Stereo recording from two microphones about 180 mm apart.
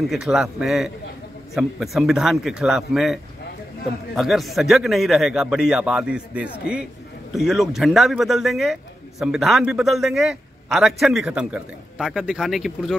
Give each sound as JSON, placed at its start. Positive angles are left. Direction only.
{"t": 0.1, "sound": "a man's voice", "side_deg": -5}